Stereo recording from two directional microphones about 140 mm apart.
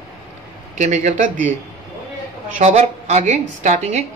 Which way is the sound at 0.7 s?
55° right (ahead or behind).